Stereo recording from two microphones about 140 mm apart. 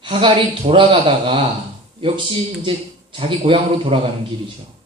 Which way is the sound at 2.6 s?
40° right (ahead or behind).